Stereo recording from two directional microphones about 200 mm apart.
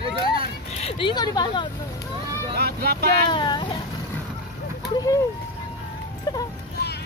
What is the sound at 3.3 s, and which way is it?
Speech, 25° left (ahead or behind).